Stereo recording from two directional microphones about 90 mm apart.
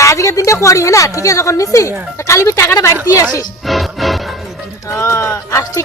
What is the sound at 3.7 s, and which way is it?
Music, centre (ahead or behind).